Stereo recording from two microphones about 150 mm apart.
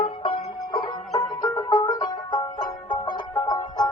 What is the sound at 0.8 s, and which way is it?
Banjo, 25° left (ahead or behind).